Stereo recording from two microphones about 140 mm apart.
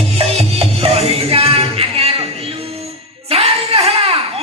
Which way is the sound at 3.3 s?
45° right (ahead or behind).